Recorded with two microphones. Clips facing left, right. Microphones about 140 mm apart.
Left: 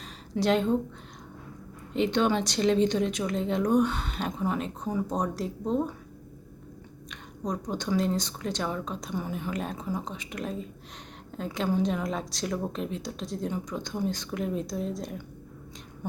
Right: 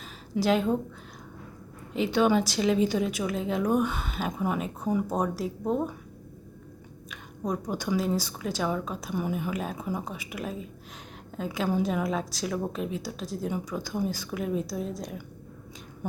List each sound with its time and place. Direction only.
0.3 s a woman's voice: 5° right (ahead or behind)
1.9 s speech: 5° right (ahead or behind)
7.1 s a woman's voice: 5° right (ahead or behind)